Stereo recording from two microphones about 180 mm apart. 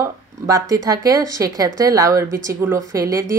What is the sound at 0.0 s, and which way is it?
Speech, 20° right (ahead or behind).